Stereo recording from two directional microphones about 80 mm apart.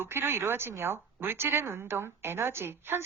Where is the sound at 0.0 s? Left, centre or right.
Right.